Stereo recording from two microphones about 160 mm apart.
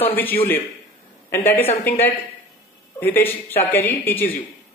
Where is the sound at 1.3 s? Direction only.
15° left (ahead or behind).